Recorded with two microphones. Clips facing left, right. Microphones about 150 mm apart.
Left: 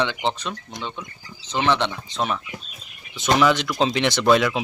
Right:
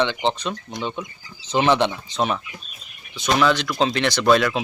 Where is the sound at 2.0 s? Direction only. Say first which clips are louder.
Right 2 dB; centre (ahead or behind).